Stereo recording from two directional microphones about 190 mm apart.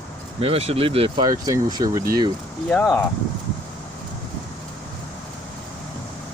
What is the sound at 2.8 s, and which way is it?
Speech, 5° left (ahead or behind).